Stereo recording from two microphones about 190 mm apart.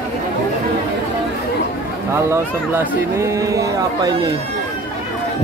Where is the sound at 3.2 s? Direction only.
15° right (ahead or behind).